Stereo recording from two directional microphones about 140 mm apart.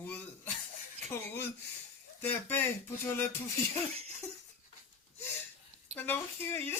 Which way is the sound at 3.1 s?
20° left (ahead or behind).